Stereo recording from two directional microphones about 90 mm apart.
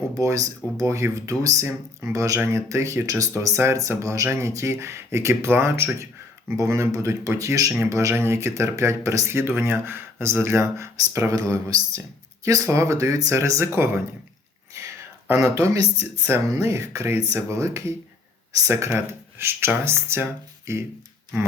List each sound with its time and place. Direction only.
0.1 s speech: 35° right (ahead or behind)
16.2 s speech: 25° right (ahead or behind)